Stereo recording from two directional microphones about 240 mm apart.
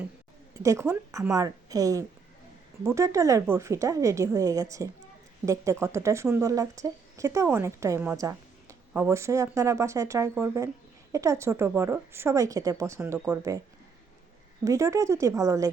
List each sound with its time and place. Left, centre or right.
0.6 s a woman's voice: centre
14.6 s a woman's voice: centre